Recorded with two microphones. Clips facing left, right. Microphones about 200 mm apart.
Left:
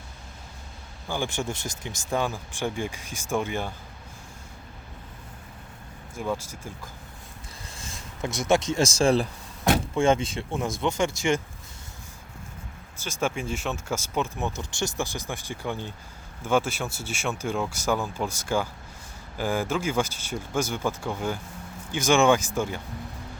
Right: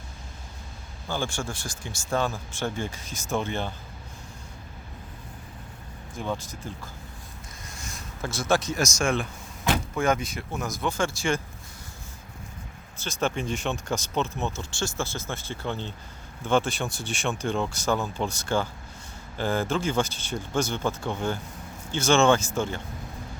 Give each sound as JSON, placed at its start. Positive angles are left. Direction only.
{"t": 1.0, "sound": "speech", "side_deg": 15}
{"t": 6.1, "sound": "speech", "side_deg": 10}
{"t": 7.7, "sound": "speech", "side_deg": 25}
{"t": 13.0, "sound": "speech", "side_deg": 10}